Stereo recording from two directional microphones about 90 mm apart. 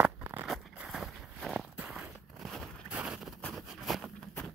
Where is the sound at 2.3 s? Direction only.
Centre (ahead or behind).